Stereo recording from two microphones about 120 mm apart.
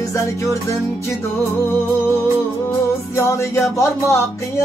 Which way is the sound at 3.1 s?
25° left (ahead or behind).